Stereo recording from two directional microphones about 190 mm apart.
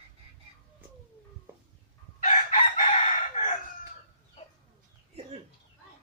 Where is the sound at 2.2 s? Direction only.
40° left (ahead or behind).